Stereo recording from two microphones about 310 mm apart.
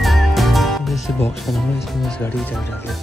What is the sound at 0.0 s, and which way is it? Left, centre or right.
Speech, centre.